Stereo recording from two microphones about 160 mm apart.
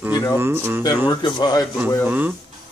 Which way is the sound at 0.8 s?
25° left (ahead or behind).